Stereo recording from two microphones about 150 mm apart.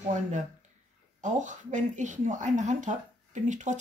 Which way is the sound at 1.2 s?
55° right (ahead or behind).